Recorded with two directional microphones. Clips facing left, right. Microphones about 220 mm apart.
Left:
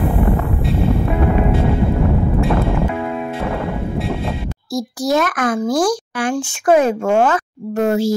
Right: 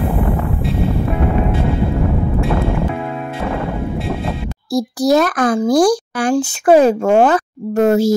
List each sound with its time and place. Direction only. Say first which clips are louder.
4.7 s speech: right 4 dB; 35° right (ahead or behind)